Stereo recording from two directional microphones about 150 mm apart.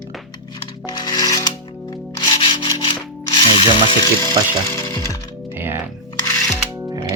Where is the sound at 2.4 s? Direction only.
30° left (ahead or behind).